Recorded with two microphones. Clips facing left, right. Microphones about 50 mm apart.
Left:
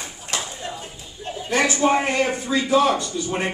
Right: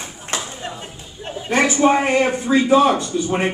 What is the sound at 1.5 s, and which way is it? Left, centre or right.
A man's voice, right.